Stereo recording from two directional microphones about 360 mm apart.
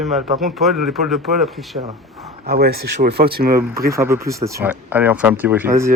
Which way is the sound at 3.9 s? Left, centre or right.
Centre.